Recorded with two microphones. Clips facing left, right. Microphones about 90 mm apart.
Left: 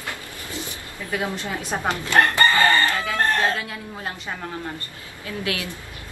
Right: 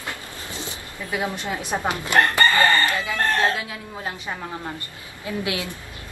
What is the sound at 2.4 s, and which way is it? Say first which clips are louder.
Chicken: even; 20° left (ahead or behind).